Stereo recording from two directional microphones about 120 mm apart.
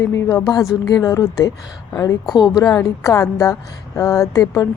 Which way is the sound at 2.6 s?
25° left (ahead or behind).